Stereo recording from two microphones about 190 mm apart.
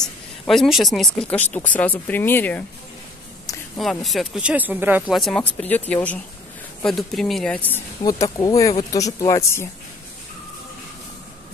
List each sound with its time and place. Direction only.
0.0 s a woman's voice: centre (ahead or behind)
3.7 s speech: centre (ahead or behind)
8.0 s speech: 20° left (ahead or behind)